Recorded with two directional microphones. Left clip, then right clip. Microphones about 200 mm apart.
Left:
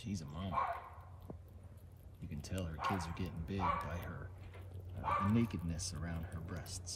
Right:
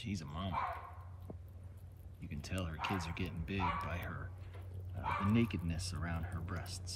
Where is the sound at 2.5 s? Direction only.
20° left (ahead or behind).